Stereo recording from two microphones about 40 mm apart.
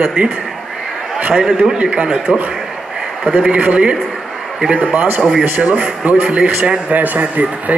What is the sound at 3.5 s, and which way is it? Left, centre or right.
A man's voice, right.